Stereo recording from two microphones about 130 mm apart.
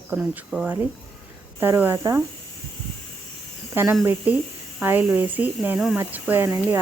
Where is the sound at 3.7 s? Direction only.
20° right (ahead or behind).